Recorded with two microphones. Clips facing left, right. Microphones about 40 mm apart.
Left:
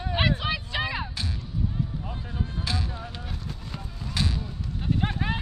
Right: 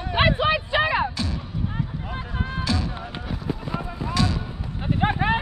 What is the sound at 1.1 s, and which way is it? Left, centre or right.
Music, right.